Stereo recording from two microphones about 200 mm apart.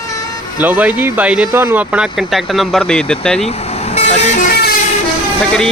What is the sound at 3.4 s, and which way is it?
Speech, 30° left (ahead or behind).